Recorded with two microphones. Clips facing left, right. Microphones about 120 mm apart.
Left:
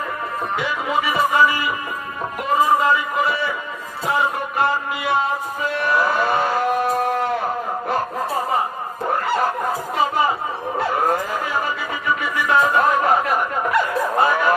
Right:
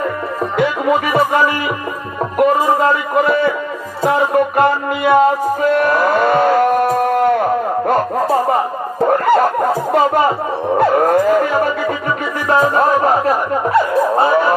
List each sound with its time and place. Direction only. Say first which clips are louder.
0.6 s speech: right 9 dB; 50° right (ahead or behind)
4.0 s music: right 8 dB; 50° right (ahead or behind)
9.1 s snicker: right 7 dB; 50° right (ahead or behind)
10.8 s music: right 8 dB; 50° right (ahead or behind)
12.4 s music: right 4 dB; 40° right (ahead or behind)